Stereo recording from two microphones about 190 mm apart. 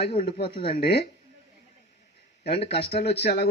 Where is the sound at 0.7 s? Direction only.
55° left (ahead or behind).